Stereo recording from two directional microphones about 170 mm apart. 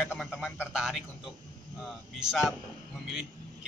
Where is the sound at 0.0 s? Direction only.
Centre (ahead or behind).